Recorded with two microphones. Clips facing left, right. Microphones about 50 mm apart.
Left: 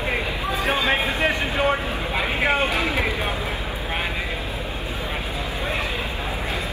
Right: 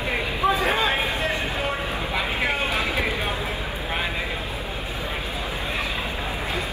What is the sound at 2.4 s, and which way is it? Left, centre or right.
Vehicle, left.